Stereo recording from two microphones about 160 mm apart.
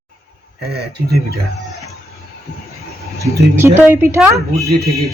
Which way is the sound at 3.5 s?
15° right (ahead or behind).